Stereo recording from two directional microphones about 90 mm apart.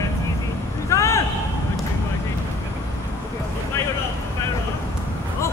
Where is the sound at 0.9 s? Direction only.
30° left (ahead or behind).